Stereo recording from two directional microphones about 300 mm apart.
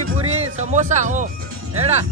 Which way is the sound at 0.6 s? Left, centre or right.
Right.